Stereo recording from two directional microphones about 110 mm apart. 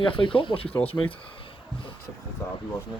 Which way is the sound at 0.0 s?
50° left (ahead or behind).